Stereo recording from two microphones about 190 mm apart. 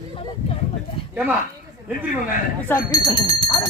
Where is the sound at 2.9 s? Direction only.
20° left (ahead or behind).